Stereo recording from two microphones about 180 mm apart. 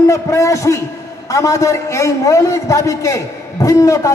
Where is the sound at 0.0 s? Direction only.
15° left (ahead or behind).